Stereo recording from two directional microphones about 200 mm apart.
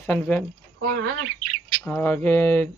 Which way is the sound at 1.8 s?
10° left (ahead or behind).